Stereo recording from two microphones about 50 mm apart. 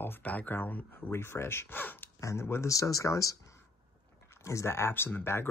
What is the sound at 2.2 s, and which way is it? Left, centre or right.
Speech, left.